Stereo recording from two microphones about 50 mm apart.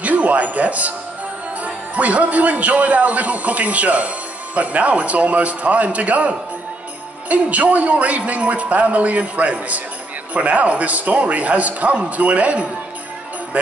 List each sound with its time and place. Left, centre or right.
0.0 s a man's voice: right